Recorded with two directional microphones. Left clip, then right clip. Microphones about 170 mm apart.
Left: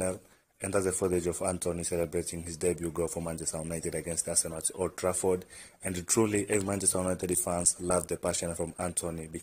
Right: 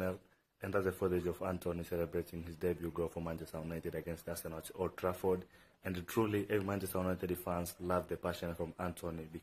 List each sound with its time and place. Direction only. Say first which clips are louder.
0.6 s speech: left 6 dB; 30° left (ahead or behind)